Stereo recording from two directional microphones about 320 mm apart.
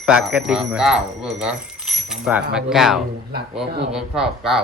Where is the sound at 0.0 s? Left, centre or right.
Centre.